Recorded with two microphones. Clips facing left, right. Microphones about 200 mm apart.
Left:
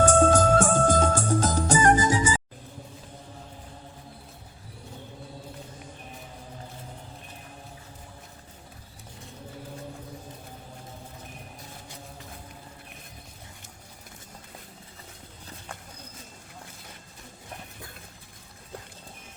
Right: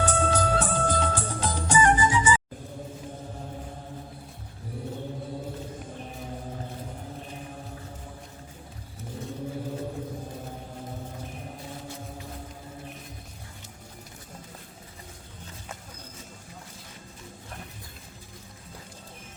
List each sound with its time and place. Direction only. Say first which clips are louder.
0.0 s music: left 6 dB; 45° left (ahead or behind)